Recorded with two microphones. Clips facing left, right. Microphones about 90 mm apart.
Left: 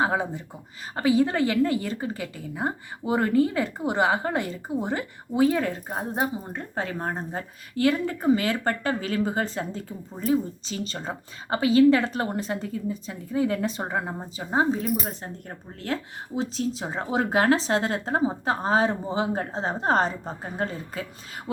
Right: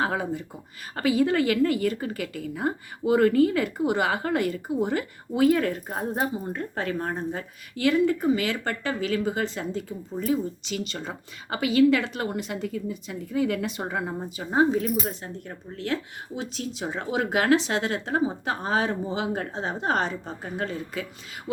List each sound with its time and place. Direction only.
0.0 s a woman's voice: 25° left (ahead or behind)